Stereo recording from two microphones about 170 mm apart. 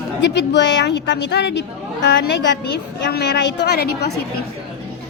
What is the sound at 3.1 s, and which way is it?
A woman's voice, 75° left (ahead or behind).